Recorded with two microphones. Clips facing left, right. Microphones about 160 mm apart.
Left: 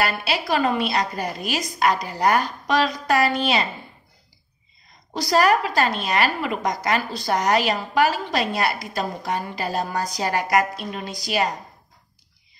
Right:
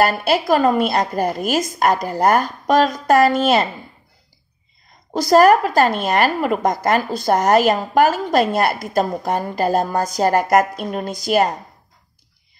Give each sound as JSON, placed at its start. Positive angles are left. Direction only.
{"t": 0.0, "sound": "a woman's voice", "side_deg": -45}
{"t": 5.1, "sound": "a woman's voice", "side_deg": -45}